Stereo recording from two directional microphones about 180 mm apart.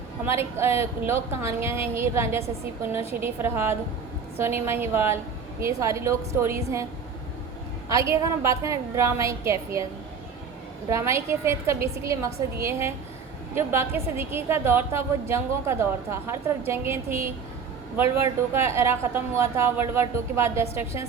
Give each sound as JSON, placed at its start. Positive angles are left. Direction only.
{"t": 0.3, "sound": "a woman's voice", "side_deg": -15}
{"t": 7.9, "sound": "a woman's voice", "side_deg": -15}
{"t": 10.8, "sound": "a woman's voice", "side_deg": -15}